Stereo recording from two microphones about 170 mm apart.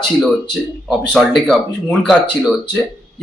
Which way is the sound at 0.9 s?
Centre (ahead or behind).